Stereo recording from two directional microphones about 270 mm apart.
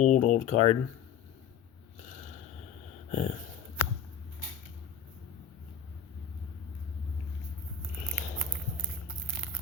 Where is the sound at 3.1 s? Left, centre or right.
Left.